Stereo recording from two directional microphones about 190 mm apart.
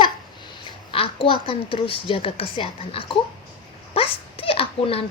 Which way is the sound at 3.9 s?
30° left (ahead or behind).